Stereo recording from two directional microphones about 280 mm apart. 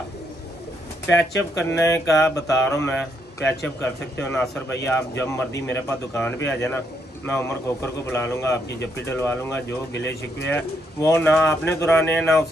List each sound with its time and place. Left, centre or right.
1.0 s a man's voice: centre
2.0 s mantra: centre
2.3 s a man's voice: centre
8.6 s speech: left
9.0 s a man's voice: centre
9.9 s speech: left
10.5 s a man's voice: centre